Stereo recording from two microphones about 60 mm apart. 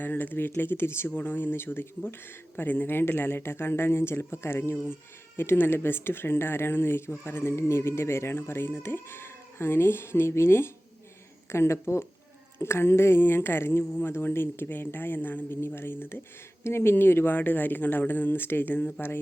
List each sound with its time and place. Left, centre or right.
0.0 s speech: left